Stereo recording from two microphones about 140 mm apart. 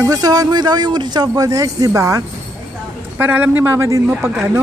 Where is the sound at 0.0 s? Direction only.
25° right (ahead or behind).